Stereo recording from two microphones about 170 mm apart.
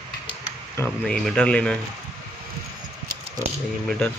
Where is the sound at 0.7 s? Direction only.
10° left (ahead or behind).